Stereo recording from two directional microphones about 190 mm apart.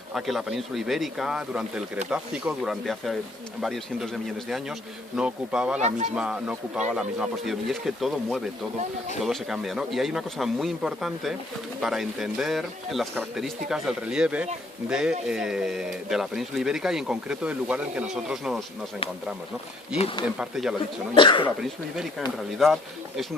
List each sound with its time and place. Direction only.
0.1 s speech: centre (ahead or behind)
20.2 s speech: 5° right (ahead or behind)
21.2 s speech: 25° left (ahead or behind)
22.5 s speech: centre (ahead or behind)